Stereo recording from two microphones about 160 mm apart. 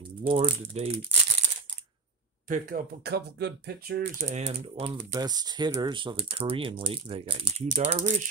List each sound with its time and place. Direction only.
0.2 s speech: 35° right (ahead or behind)
2.4 s speech: 55° right (ahead or behind); by 4.0 s 90° right
4.0 s speech: 55° right (ahead or behind)
5.1 s speech: 25° right (ahead or behind); by 8.2 s 50° right (ahead or behind)